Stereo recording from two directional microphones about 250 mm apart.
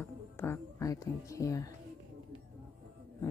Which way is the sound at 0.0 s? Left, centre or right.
Centre.